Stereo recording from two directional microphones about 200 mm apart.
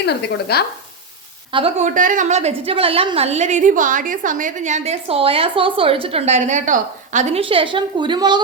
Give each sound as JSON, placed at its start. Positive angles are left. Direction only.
{"t": 0.0, "sound": "speech", "side_deg": 55}
{"t": 1.5, "sound": "a woman's voice", "side_deg": -35}